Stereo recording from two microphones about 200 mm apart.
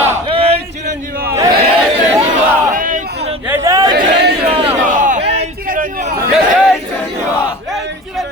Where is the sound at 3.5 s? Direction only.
15° right (ahead or behind).